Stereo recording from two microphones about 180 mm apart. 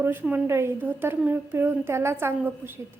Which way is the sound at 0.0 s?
10° right (ahead or behind).